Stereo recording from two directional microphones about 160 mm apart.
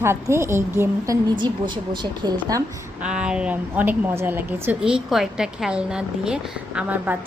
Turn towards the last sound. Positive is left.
turn(degrees=-10)  # may be behind; listen again after turning